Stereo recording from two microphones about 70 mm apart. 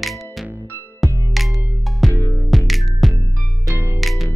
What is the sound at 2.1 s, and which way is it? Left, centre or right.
Music, left.